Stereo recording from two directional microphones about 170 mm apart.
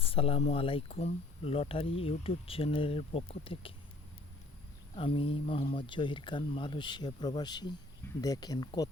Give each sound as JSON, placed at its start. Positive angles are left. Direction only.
{"t": 0.0, "sound": "speech", "side_deg": 35}
{"t": 4.9, "sound": "speech", "side_deg": 30}